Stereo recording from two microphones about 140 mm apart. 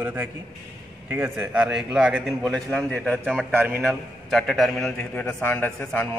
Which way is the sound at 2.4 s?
5° left (ahead or behind).